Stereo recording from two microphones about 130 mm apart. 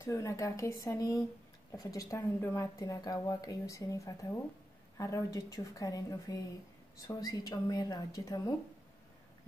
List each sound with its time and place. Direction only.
0.0 s a woman's voice: 25° left (ahead or behind)